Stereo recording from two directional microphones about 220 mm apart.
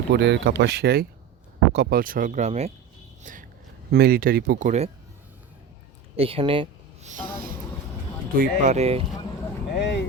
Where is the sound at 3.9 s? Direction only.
45° right (ahead or behind).